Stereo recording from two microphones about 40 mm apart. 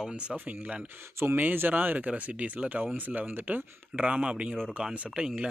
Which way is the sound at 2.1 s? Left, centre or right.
Right.